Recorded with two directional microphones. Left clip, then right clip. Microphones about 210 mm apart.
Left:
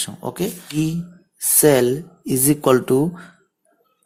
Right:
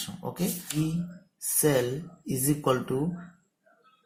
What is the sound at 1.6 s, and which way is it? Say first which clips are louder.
Speech: left 11 dB; 50° left (ahead or behind).